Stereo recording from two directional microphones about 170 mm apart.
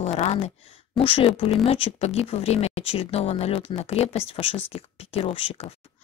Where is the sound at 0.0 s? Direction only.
40° left (ahead or behind).